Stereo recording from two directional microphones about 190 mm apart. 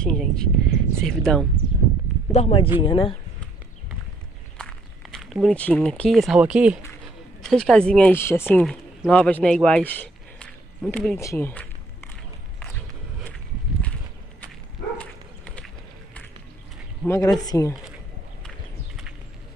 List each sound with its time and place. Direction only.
0.0 s speech: centre (ahead or behind)
2.3 s speech: 30° left (ahead or behind)
4.6 s speech: 5° left (ahead or behind)
15.0 s dog: 5° left (ahead or behind)
17.0 s speech: 15° left (ahead or behind)